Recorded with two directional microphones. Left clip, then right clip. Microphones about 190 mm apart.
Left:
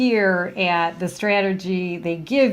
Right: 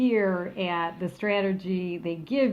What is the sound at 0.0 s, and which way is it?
A woman's voice, 45° left (ahead or behind).